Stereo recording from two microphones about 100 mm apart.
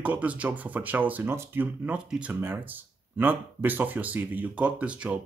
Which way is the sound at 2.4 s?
20° right (ahead or behind).